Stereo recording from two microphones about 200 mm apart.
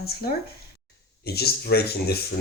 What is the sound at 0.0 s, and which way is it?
Speech, 50° left (ahead or behind).